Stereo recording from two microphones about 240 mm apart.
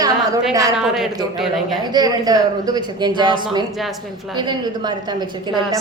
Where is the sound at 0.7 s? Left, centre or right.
Centre.